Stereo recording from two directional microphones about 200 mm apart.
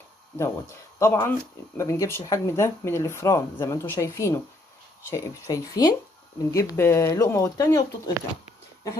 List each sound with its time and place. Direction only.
0.3 s speech: 15° left (ahead or behind)